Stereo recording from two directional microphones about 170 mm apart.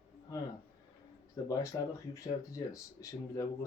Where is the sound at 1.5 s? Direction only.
20° left (ahead or behind).